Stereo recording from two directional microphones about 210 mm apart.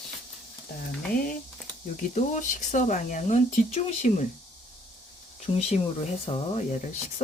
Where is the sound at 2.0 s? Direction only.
35° left (ahead or behind).